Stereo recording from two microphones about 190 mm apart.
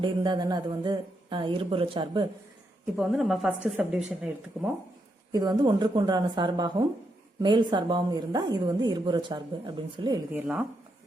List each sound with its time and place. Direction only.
0.0 s a woman's voice: 25° right (ahead or behind)
3.0 s speech: centre (ahead or behind)
5.3 s a woman's voice: 20° right (ahead or behind)
10.3 s speech: 10° right (ahead or behind)